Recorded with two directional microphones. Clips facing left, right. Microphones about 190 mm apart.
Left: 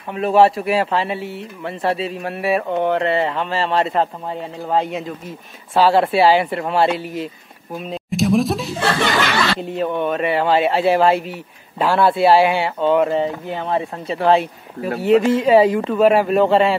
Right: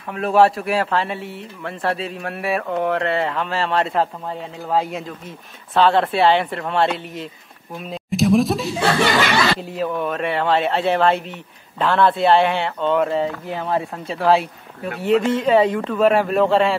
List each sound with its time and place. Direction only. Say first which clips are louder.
0.1 s speech: left 2 dB; centre (ahead or behind)